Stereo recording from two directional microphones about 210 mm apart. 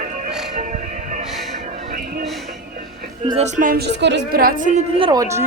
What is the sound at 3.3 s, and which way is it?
A woman's voice, 35° right (ahead or behind).